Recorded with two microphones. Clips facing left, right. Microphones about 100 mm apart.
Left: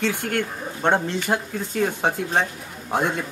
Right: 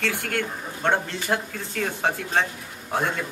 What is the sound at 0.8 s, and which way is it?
A man's voice, 20° left (ahead or behind).